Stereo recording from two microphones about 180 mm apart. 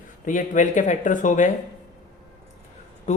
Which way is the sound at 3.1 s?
40° left (ahead or behind).